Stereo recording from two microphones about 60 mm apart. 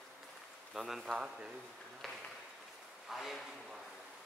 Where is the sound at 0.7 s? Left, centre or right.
Centre.